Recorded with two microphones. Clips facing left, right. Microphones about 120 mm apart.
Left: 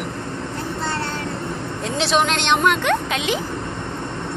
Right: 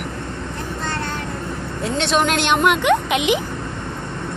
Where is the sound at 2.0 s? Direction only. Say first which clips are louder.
Right 1 dB; centre (ahead or behind).